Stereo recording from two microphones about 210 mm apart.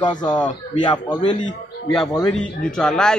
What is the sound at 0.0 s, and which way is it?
A man's voice, 20° left (ahead or behind).